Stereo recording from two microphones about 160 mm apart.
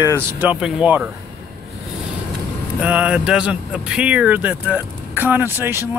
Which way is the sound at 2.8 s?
10° right (ahead or behind).